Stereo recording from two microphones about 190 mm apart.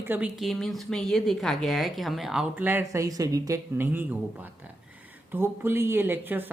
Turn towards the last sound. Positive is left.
turn(degrees=-10)  # may be behind; listen again after turning